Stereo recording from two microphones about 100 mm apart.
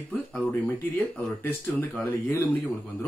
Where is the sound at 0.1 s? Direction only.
15° left (ahead or behind).